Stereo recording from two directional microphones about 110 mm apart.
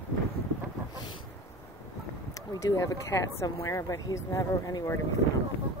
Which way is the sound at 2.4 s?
30° left (ahead or behind).